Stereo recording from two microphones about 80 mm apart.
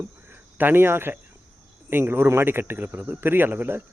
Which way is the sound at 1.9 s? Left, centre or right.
Right.